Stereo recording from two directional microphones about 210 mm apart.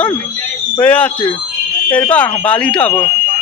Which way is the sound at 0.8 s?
5° left (ahead or behind).